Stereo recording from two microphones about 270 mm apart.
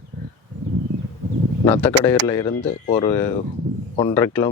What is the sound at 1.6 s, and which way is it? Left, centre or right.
Speech, centre.